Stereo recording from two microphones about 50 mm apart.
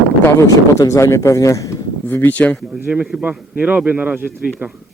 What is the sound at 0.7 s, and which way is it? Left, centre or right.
Speech, left.